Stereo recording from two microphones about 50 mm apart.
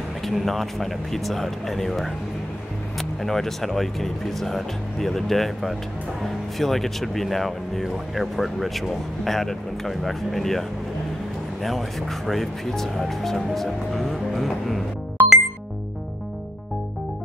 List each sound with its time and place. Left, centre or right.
0.2 s speech: centre
11.6 s speech: centre
15.2 s music: right